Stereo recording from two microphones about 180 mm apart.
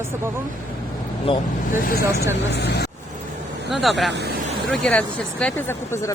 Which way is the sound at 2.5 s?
65° left (ahead or behind).